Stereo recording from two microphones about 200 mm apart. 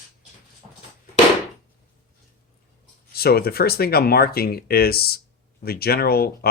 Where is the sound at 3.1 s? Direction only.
50° left (ahead or behind).